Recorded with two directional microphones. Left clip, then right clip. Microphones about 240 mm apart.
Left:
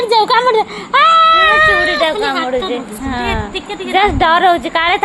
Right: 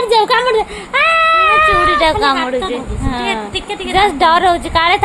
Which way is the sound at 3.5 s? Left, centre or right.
Right.